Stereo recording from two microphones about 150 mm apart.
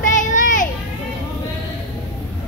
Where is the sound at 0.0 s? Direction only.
60° left (ahead or behind).